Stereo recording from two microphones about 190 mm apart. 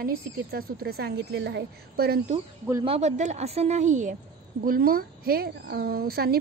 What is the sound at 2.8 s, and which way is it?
A woman's voice, 35° right (ahead or behind).